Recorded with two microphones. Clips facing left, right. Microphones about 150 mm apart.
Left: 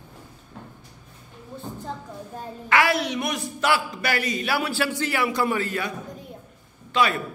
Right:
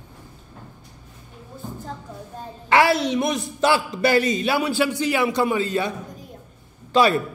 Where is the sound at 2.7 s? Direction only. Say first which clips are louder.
Right 4 dB; 30° right (ahead or behind).